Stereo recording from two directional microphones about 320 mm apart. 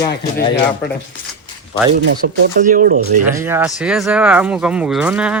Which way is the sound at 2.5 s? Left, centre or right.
Right.